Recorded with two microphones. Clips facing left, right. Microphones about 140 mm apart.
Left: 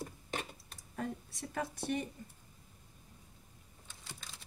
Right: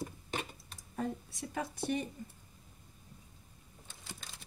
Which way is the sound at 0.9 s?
20° right (ahead or behind).